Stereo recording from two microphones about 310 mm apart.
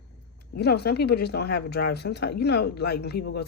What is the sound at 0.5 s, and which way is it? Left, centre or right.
Speech, left.